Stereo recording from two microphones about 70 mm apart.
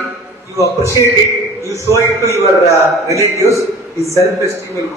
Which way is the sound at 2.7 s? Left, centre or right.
Right.